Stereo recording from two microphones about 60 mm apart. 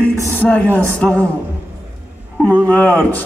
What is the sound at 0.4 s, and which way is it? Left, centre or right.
Music, left.